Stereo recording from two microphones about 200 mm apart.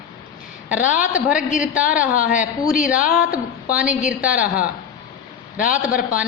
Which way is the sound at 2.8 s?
45° left (ahead or behind).